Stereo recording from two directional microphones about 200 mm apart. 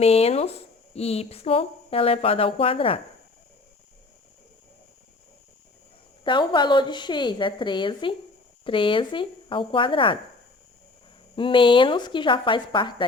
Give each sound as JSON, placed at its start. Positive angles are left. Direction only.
{"t": 0.0, "sound": "speech", "side_deg": 30}
{"t": 6.2, "sound": "speech", "side_deg": 25}
{"t": 11.3, "sound": "speech", "side_deg": 25}